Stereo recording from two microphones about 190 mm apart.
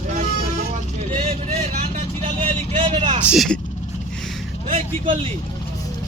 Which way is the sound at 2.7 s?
30° right (ahead or behind).